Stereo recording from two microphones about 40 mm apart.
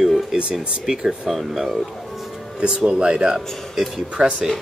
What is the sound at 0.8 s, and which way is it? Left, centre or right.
Speech, centre.